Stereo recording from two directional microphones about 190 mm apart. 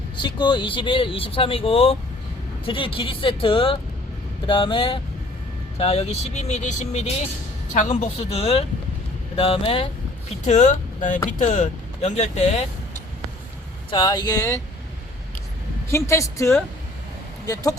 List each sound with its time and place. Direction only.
0.2 s speech: 25° left (ahead or behind)
13.9 s speech: 25° left (ahead or behind)
15.9 s a woman's voice: 15° left (ahead or behind)